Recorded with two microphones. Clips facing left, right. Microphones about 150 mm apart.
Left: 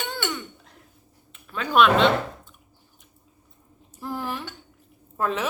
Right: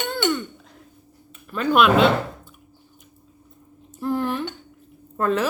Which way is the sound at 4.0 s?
Centre (ahead or behind).